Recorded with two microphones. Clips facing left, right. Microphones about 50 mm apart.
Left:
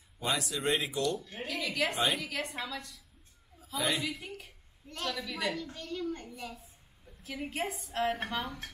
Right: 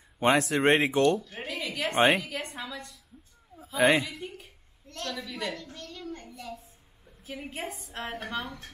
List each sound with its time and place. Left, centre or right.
0.2 s speech: right
1.5 s a sound: centre
2.0 s speech: right
2.2 s a woman's voice: centre
4.0 s a woman's voice: centre
4.8 s a woman's voice: centre
5.1 s a woman's voice: centre
7.2 s a woman's voice: centre